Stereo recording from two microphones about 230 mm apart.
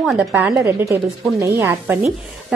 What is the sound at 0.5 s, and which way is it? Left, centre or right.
Speech, centre.